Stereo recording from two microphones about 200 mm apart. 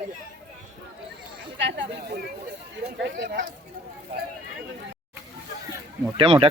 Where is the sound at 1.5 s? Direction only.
65° right (ahead or behind).